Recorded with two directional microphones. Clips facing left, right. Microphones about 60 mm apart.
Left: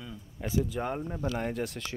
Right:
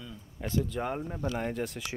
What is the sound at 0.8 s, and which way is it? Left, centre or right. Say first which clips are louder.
Speech: even; centre.